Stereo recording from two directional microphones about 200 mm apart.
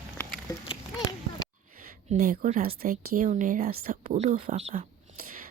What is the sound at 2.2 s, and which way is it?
Speech, 40° right (ahead or behind).